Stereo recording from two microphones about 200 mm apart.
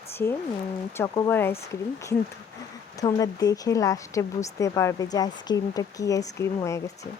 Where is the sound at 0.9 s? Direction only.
15° left (ahead or behind).